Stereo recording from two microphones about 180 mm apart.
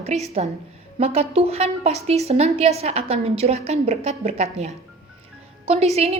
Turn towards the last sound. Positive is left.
turn(degrees=-35)  # may be behind; listen again after turning